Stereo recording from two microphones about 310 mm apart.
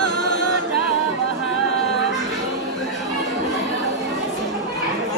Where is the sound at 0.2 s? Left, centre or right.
Left.